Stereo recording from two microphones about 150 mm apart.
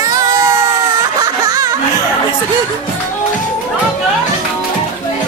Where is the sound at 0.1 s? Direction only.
25° right (ahead or behind).